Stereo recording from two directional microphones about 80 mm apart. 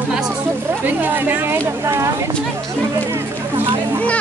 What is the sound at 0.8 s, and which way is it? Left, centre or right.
Speech, right.